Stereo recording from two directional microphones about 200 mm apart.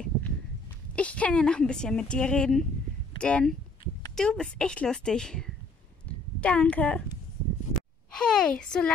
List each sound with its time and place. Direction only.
0.9 s a woman's voice: 5° left (ahead or behind)
6.0 s a sound: 5° left (ahead or behind)
8.1 s a woman's voice: 5° left (ahead or behind)